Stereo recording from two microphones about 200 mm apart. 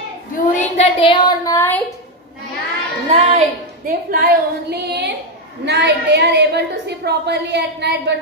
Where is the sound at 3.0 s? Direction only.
35° right (ahead or behind).